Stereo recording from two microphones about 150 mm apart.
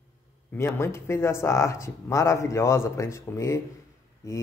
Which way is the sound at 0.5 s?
15° left (ahead or behind).